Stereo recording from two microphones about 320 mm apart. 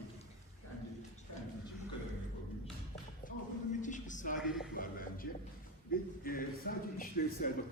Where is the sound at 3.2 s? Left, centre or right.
Left.